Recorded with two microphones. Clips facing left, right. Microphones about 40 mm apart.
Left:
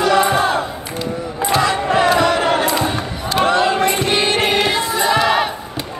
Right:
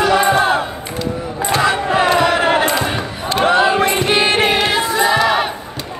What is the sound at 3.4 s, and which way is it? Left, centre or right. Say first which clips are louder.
Music: right 2 dB; centre.